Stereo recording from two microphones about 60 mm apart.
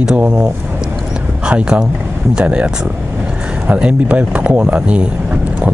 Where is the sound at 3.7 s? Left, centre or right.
Right.